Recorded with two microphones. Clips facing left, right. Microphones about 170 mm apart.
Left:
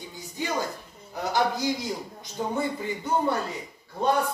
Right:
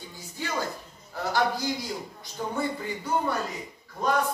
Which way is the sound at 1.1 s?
20° left (ahead or behind).